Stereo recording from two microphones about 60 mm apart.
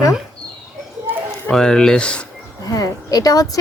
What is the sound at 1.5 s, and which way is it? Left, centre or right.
Speech, centre.